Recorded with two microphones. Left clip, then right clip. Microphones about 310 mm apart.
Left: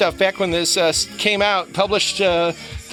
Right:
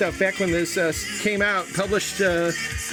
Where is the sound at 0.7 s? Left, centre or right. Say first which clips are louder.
Left 6 dB; left.